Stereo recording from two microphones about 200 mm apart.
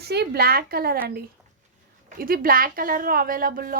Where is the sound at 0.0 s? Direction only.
55° right (ahead or behind).